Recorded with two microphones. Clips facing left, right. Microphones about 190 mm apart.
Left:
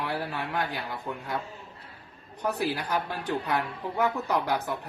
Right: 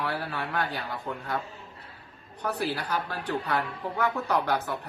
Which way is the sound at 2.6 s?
15° left (ahead or behind).